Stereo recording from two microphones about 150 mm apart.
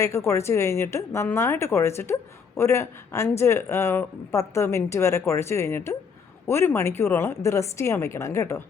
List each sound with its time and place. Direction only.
0.0 s a woman's voice: 20° left (ahead or behind)